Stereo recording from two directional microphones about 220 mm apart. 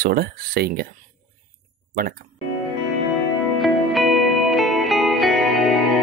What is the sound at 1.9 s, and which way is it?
Speech, 40° right (ahead or behind).